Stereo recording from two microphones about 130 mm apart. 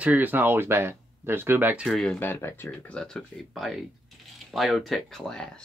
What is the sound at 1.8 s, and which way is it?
Speech, 5° left (ahead or behind).